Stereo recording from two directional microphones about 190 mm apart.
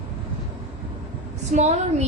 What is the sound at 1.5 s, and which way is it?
Speech, 35° right (ahead or behind).